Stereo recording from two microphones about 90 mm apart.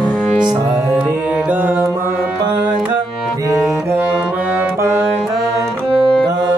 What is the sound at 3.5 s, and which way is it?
Music, 30° right (ahead or behind).